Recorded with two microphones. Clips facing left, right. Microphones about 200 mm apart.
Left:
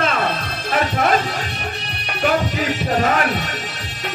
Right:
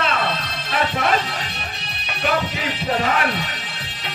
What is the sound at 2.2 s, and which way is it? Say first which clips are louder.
Music: left 4 dB; 45° left (ahead or behind).